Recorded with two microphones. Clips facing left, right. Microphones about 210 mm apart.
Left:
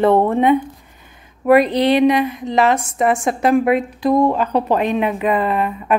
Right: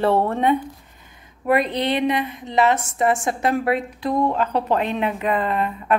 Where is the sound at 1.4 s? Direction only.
25° right (ahead or behind).